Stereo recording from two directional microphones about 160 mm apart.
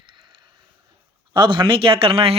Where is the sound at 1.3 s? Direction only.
30° right (ahead or behind).